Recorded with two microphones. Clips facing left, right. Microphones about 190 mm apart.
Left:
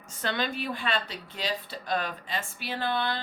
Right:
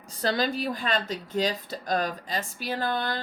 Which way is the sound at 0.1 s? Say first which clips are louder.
Right 4 dB; 35° right (ahead or behind).